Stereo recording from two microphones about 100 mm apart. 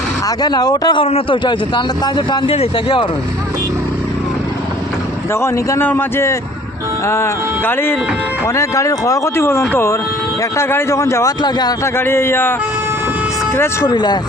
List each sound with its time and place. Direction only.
0.3 s speech: 40° left (ahead or behind)
0.9 s a man's voice: 70° left (ahead or behind)
1.5 s a man's voice: 50° left (ahead or behind)
5.3 s speech: 25° left (ahead or behind)
8.4 s speech: 35° left (ahead or behind)
11.9 s speech: 25° left (ahead or behind)
13.8 s a man's voice: 45° left (ahead or behind)